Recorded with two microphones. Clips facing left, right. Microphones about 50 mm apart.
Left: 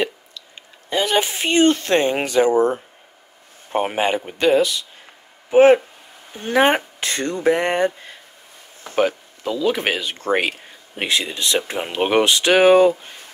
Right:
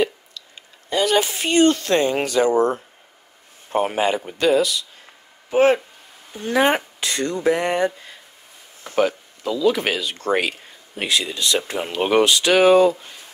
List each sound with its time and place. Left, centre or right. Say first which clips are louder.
0.6 s speech: even; left
5.5 s speech: left 5 dB; centre
6.3 s speech: left 2 dB; left